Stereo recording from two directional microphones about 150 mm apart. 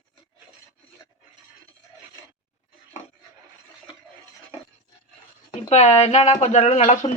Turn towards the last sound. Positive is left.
turn(degrees=50)  # may be behind; listen again after turning